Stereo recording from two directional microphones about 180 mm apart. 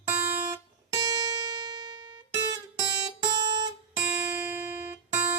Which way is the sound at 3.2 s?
25° right (ahead or behind).